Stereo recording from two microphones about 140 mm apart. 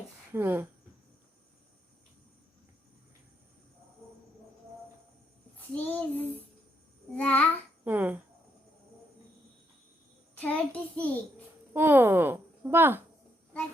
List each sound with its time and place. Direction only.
0.3 s a woman's voice: 15° right (ahead or behind)
5.5 s a child's voice: 10° left (ahead or behind)
7.9 s a woman's voice: 15° right (ahead or behind)
10.3 s a child's voice: 10° left (ahead or behind)
11.7 s a woman's voice: 15° right (ahead or behind)